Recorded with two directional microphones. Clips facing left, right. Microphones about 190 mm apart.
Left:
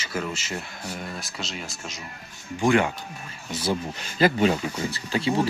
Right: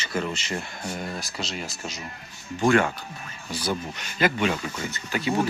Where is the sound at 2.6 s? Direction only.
15° left (ahead or behind).